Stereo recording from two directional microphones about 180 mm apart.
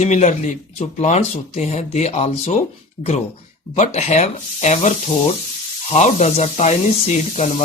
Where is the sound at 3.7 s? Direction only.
35° left (ahead or behind).